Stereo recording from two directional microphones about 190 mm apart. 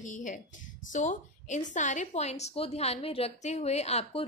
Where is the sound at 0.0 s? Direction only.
40° left (ahead or behind).